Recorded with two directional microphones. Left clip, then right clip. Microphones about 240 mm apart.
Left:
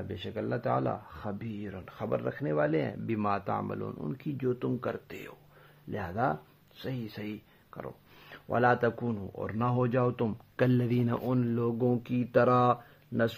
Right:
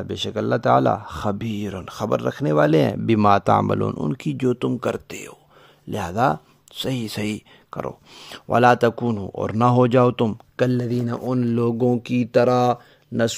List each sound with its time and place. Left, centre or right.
0.1 s speech: right
10.5 s speech: right